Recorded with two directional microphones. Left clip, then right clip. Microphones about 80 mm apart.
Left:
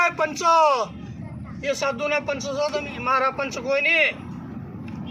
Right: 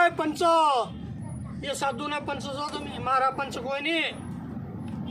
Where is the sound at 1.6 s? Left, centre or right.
Right.